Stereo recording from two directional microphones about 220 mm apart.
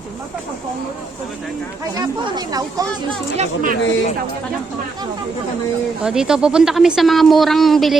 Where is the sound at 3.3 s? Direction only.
30° right (ahead or behind).